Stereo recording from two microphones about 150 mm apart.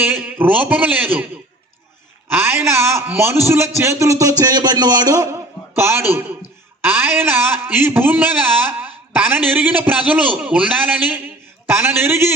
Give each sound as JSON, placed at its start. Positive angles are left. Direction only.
{"t": 0.3, "sound": "a man's voice", "side_deg": -10}
{"t": 2.3, "sound": "a man's voice", "side_deg": -15}
{"t": 11.7, "sound": "a man's voice", "side_deg": -15}